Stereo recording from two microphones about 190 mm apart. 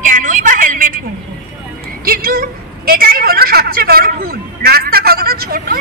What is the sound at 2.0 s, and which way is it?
A woman's voice, 50° right (ahead or behind).